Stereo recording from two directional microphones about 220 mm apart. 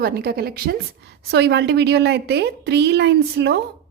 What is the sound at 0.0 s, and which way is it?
A woman's voice, 45° right (ahead or behind).